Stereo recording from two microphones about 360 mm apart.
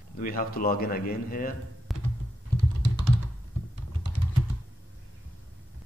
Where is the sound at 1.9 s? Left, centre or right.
Centre.